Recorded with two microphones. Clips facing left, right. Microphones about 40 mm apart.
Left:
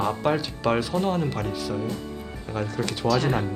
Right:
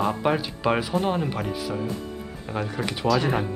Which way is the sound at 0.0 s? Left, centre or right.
Centre.